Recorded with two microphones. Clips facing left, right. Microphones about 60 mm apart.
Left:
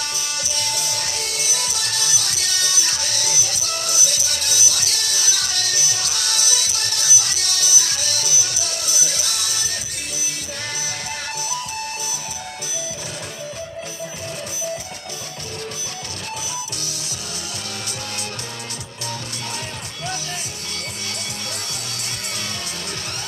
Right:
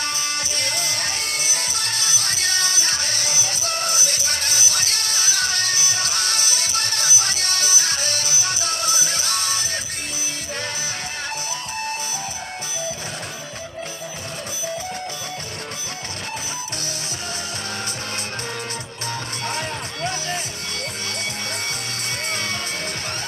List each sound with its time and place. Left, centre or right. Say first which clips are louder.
0.0 s music: right 2 dB; right
22.3 s music: right 5 dB; right